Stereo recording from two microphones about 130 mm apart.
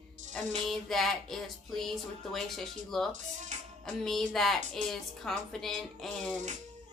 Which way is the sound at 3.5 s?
65° right (ahead or behind).